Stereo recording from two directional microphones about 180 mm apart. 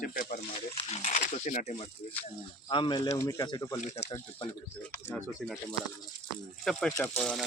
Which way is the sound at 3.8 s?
40° left (ahead or behind).